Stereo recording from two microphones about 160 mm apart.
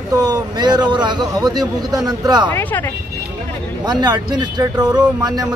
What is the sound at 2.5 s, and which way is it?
Speech, 15° left (ahead or behind).